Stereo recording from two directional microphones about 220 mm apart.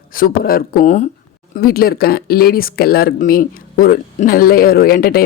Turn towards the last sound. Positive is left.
turn(degrees=40)  # may be behind; listen again after turning